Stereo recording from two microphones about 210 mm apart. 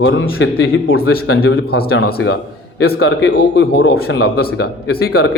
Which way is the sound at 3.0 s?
60° left (ahead or behind).